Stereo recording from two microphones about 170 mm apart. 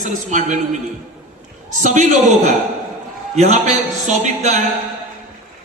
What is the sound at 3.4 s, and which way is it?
A man's voice, 45° right (ahead or behind).